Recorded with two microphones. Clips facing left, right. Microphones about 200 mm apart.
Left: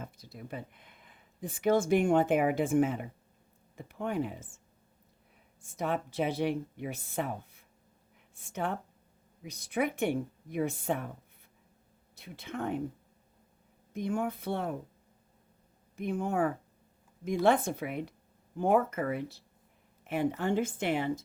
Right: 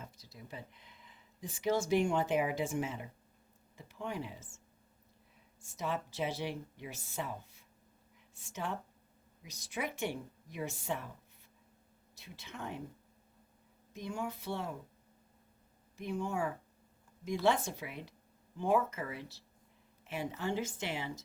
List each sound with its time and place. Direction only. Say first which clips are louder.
0.0 s speech: left 7 dB; 55° left (ahead or behind)
5.6 s speech: left 5 dB; 55° left (ahead or behind)
12.1 s speech: left 9 dB; 55° left (ahead or behind)
13.9 s speech: left 7 dB; 55° left (ahead or behind)
16.0 s speech: left 6 dB; 55° left (ahead or behind)